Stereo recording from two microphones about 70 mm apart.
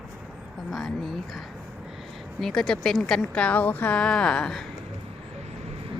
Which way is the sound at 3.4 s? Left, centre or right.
Left.